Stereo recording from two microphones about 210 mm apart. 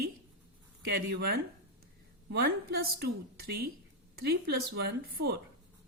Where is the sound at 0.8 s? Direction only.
50° right (ahead or behind).